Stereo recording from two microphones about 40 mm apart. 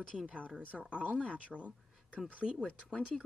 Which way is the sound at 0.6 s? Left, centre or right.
Right.